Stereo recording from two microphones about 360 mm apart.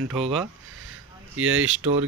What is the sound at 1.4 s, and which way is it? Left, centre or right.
Speech, right.